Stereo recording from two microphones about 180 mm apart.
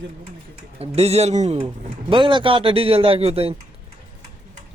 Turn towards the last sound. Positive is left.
turn(degrees=-35)  # may be behind; listen again after turning